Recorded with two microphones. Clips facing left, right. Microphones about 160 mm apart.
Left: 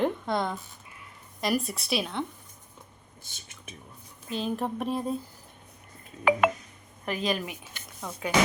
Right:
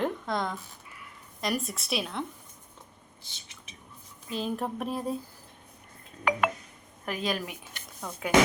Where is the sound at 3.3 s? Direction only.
50° left (ahead or behind).